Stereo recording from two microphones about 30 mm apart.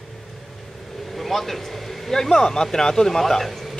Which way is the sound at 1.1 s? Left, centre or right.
Centre.